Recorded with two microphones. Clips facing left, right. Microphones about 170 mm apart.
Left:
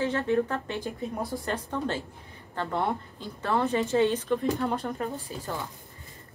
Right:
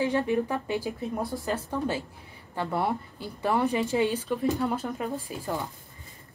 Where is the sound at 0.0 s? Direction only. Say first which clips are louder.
Even; 15° right (ahead or behind).